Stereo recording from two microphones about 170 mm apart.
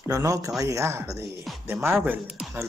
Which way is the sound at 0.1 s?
20° right (ahead or behind).